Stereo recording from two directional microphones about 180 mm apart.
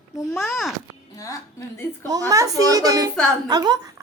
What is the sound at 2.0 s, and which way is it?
A woman's voice, 20° right (ahead or behind).